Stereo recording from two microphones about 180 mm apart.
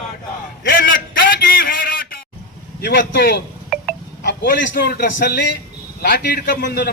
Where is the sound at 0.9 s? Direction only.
50° left (ahead or behind).